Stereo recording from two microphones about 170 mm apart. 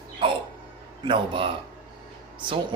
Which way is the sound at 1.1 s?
30° right (ahead or behind).